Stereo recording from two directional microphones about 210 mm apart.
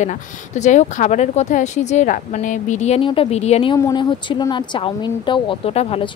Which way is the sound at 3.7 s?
20° left (ahead or behind).